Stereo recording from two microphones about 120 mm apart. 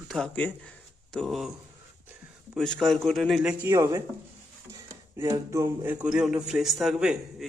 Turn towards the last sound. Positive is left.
turn(degrees=-5)  # may be behind; listen again after turning